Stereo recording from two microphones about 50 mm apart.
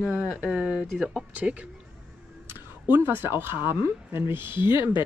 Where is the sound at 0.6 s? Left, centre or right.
Right.